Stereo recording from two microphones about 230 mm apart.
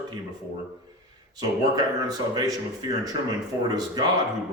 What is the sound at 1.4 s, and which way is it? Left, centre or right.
Speech, centre.